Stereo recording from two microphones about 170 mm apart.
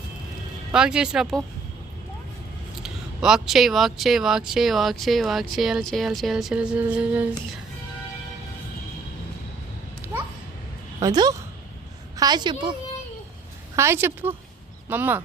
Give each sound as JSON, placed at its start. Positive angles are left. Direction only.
{"t": 0.7, "sound": "speech", "side_deg": -5}
{"t": 2.8, "sound": "speech", "side_deg": -5}
{"t": 11.0, "sound": "a woman's voice", "side_deg": -25}
{"t": 13.7, "sound": "a woman's voice", "side_deg": -15}